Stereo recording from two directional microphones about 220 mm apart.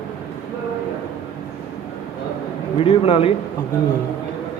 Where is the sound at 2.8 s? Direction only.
25° left (ahead or behind).